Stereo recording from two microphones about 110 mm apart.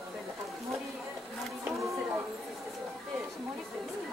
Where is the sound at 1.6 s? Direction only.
25° right (ahead or behind).